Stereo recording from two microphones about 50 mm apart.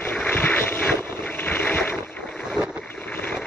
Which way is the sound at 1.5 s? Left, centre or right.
Left.